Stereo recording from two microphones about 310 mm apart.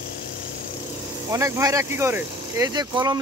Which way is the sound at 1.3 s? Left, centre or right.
Centre.